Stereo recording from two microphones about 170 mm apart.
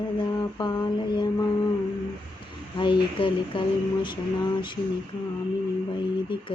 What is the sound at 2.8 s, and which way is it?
Speech, 30° left (ahead or behind).